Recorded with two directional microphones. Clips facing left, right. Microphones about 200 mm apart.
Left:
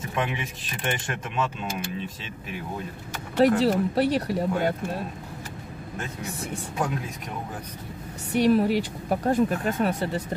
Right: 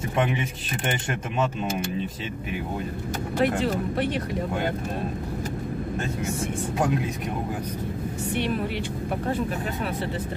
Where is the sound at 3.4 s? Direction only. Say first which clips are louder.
Left 5 dB; 35° left (ahead or behind).